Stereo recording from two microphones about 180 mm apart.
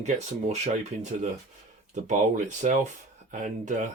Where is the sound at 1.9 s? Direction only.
45° right (ahead or behind).